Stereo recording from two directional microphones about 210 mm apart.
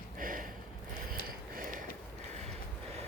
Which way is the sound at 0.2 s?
40° right (ahead or behind).